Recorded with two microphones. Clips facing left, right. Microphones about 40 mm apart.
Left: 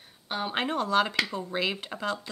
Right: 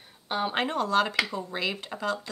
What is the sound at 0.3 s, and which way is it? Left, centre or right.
Speech, centre.